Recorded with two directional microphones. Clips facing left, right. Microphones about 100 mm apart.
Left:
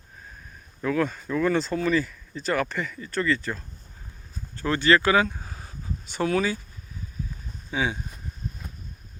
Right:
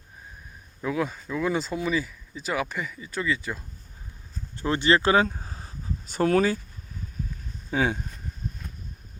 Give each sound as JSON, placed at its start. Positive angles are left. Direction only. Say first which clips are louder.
{"t": 0.8, "sound": "speech", "louder": "left 3 dB", "side_deg": -10}
{"t": 4.5, "sound": "speech", "louder": "left 1 dB", "side_deg": -20}
{"t": 7.7, "sound": "speech", "louder": "right 2 dB", "side_deg": -50}